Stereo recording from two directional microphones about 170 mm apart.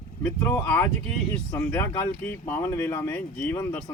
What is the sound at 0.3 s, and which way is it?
Speech, 15° left (ahead or behind).